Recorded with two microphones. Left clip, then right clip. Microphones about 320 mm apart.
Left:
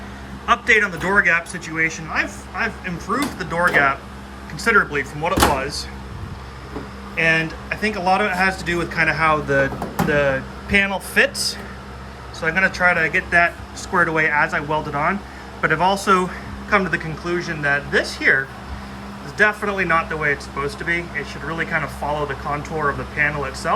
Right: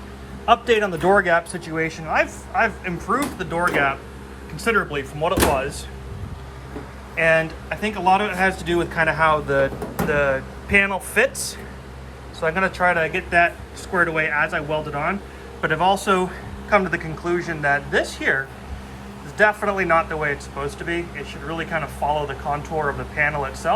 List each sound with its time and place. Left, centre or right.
0.6 s speech: centre
7.2 s speech: centre
12.4 s speech: centre